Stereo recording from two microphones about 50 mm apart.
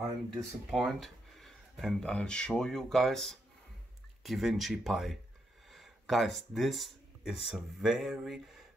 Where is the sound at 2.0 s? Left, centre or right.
Centre.